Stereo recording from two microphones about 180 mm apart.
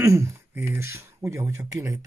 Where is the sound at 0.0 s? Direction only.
15° right (ahead or behind).